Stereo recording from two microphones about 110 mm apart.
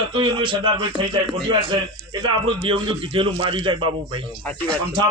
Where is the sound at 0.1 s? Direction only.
50° right (ahead or behind).